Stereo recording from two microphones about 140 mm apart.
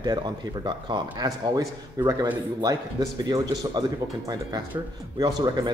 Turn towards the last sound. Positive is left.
turn(degrees=-30)  # may be behind; listen again after turning